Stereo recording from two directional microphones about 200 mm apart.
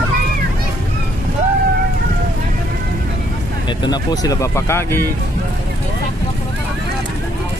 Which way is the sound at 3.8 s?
20° left (ahead or behind).